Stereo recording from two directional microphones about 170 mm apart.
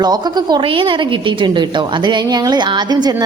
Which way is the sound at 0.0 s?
25° right (ahead or behind).